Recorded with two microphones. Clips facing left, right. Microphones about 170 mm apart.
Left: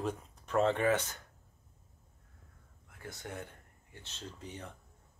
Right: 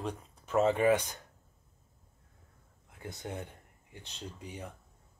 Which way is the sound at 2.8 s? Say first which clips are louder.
Right 3 dB; 20° right (ahead or behind).